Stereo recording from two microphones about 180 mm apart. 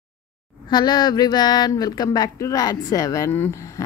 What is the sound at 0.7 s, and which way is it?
Speech, 25° left (ahead or behind).